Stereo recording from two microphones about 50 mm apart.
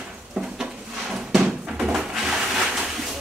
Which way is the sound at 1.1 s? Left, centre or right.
Centre.